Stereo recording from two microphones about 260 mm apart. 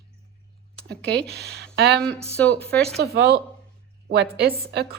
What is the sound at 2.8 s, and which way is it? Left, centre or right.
Speech, right.